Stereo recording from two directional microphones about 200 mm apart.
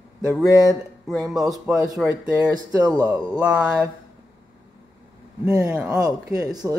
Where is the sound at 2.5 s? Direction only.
20° right (ahead or behind).